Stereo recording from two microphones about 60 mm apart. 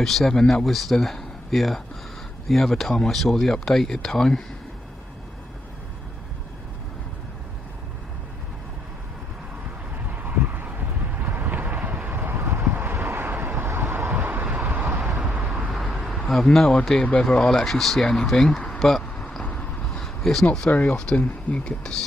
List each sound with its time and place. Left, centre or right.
0.0 s speech: centre
10.1 s vehicle: right
15.3 s vehicle: centre
15.7 s vehicle: centre
17.2 s speech: centre
20.0 s a sound: centre
20.5 s speech: centre